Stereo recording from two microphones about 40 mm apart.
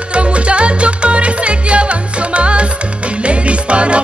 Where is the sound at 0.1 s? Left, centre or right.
Right.